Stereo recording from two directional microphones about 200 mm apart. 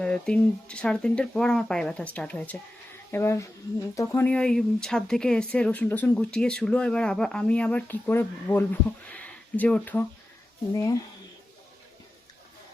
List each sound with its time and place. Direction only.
0.0 s speech: 5° left (ahead or behind)